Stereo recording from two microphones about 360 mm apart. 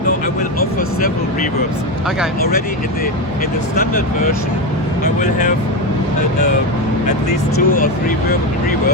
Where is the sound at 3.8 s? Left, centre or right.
Left.